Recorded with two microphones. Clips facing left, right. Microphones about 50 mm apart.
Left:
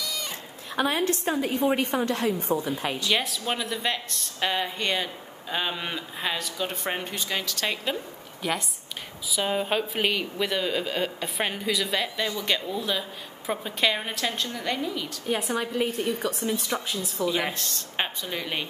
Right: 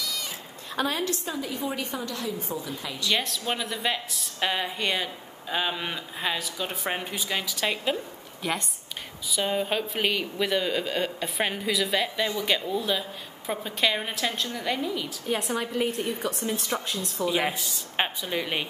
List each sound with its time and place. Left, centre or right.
0.0 s cat: centre
0.7 s a woman's voice: left
1.0 s a woman's voice: left
3.1 s speech: centre
17.2 s speech: centre